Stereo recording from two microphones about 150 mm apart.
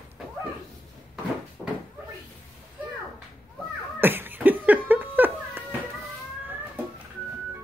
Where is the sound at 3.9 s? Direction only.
15° right (ahead or behind).